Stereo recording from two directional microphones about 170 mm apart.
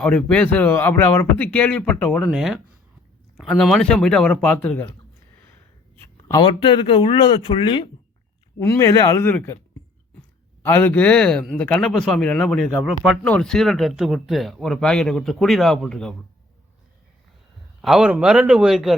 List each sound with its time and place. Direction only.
0.0 s a man's voice: 5° left (ahead or behind)
6.4 s speech: 30° left (ahead or behind)
8.5 s a man's voice: 20° left (ahead or behind); by 16.1 s 5° left (ahead or behind)
17.8 s a man's voice: 5° right (ahead or behind)